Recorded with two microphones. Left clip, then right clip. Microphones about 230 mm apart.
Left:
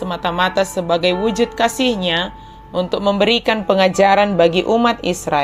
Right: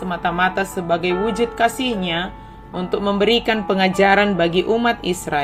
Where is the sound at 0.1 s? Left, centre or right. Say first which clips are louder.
Left 1 dB; centre.